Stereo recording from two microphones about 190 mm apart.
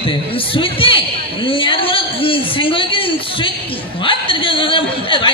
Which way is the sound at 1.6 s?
25° left (ahead or behind).